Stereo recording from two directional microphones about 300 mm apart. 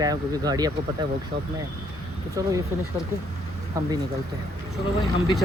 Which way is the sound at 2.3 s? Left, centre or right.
Centre.